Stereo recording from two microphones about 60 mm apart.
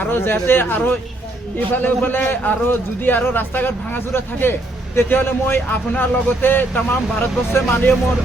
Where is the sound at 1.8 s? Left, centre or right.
Left.